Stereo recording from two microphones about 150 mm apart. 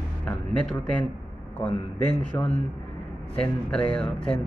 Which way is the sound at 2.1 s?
10° left (ahead or behind).